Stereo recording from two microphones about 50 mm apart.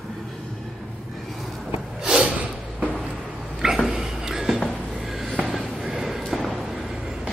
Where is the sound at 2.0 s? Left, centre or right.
Centre.